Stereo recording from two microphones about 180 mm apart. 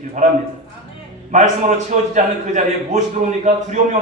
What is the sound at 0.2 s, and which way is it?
Speech, 45° right (ahead or behind).